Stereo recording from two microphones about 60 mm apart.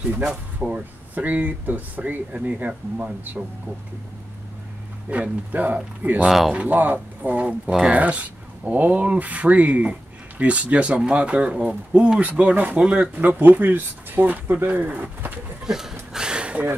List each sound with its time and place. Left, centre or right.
0.2 s speech: centre
5.1 s speech: right
6.2 s speech: centre
6.5 s speech: right
7.6 s speech: centre
8.0 s speech: right
13.1 s speech: right
15.6 s a sound: centre